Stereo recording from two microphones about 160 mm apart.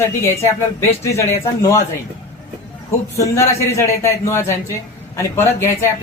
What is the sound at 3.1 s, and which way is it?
A man's voice, 20° left (ahead or behind).